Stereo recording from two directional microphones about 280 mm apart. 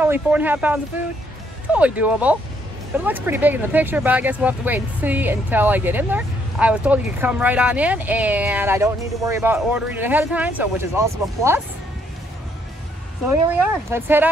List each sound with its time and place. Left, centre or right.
0.0 s speech: centre
13.3 s speech: centre